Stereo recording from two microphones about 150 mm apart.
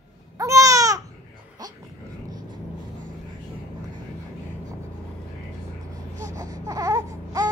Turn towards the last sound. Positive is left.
turn(degrees=-25)  # may be behind; listen again after turning